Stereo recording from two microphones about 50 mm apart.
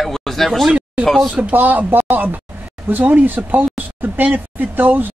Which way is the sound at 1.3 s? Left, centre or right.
Right.